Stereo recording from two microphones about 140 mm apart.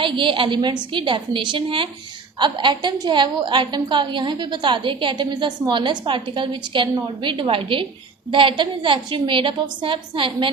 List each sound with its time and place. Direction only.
0.0 s a woman's voice: 35° right (ahead or behind)